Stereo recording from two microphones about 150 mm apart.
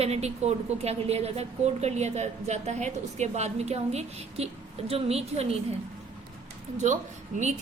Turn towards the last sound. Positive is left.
turn(degrees=-55)  # may be behind; listen again after turning